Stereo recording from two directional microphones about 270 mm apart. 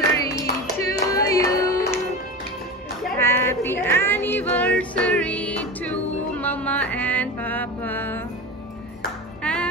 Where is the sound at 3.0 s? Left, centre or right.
Centre.